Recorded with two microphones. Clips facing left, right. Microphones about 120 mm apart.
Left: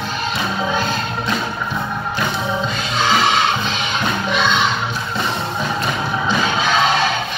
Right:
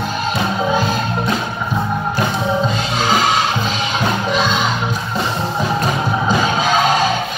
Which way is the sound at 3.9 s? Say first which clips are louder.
Right 2 dB; 35° right (ahead or behind).